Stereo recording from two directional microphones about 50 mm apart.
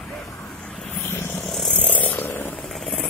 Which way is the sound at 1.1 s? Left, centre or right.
Left.